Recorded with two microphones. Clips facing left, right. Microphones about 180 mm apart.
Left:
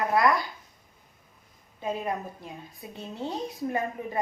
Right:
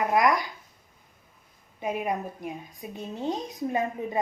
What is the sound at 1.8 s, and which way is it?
A woman's voice, 15° right (ahead or behind).